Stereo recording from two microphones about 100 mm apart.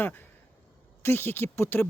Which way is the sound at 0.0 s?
20° left (ahead or behind).